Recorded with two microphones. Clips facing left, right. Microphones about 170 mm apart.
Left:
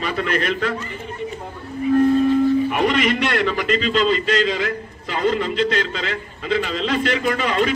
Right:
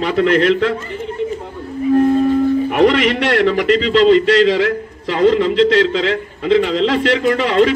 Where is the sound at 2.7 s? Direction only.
75° right (ahead or behind).